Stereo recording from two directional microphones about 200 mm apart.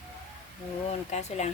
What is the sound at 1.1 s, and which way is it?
Speech, 35° left (ahead or behind).